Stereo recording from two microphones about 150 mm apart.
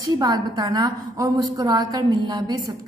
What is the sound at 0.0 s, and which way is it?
A woman's voice, 25° right (ahead or behind).